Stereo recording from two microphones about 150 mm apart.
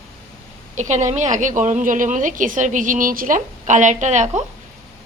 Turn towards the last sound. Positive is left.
turn(degrees=-55)  # may be behind; listen again after turning